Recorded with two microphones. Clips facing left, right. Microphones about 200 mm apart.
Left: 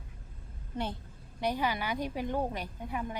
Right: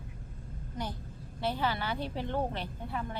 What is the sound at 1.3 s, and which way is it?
A woman's voice, 15° left (ahead or behind).